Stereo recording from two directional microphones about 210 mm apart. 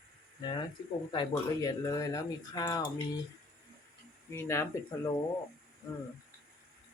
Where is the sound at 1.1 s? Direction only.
20° left (ahead or behind).